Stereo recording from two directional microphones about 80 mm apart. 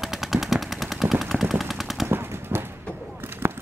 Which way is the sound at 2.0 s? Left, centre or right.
Right.